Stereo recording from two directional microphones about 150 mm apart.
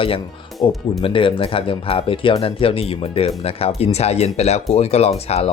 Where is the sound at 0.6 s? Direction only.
35° left (ahead or behind).